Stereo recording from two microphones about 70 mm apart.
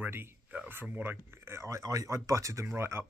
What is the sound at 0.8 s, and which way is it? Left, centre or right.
Speech, right.